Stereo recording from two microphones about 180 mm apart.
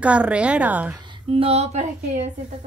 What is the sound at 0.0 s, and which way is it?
Speech, 5° right (ahead or behind).